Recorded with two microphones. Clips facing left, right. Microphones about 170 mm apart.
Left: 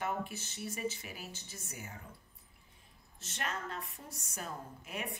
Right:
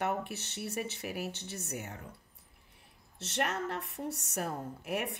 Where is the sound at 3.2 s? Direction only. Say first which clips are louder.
Right 7 dB; 75° right (ahead or behind).